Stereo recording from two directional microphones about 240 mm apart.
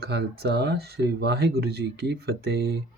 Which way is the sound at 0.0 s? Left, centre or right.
Right.